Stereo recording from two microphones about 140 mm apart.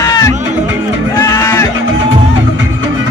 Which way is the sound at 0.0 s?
25° left (ahead or behind).